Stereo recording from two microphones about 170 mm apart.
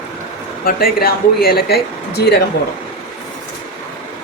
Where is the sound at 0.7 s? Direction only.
60° left (ahead or behind).